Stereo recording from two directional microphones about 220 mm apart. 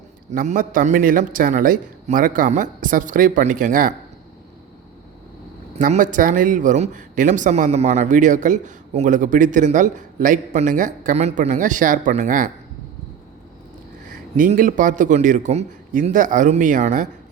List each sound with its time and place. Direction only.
0.3 s speech: 35° right (ahead or behind)
5.7 s speech: 35° right (ahead or behind)
14.1 s speech: 35° right (ahead or behind)